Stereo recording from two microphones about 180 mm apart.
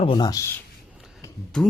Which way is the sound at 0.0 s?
25° left (ahead or behind).